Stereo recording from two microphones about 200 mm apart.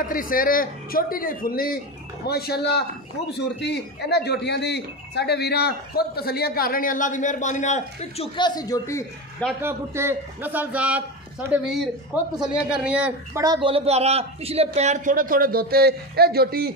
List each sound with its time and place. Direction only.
0.0 s speech: 45° left (ahead or behind); by 9.0 s 15° left (ahead or behind)
9.6 s a man's voice: 10° right (ahead or behind); by 16.7 s 50° right (ahead or behind)